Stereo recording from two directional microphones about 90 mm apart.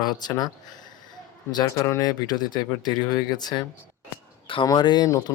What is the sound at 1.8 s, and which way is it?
Speech, 35° left (ahead or behind).